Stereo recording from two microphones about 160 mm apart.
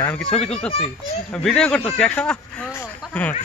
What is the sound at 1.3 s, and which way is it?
Speech, 5° left (ahead or behind).